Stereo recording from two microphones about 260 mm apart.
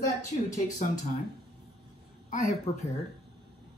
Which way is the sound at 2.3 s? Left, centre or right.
Left.